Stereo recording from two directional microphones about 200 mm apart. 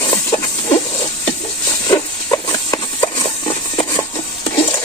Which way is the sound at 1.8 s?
15° left (ahead or behind).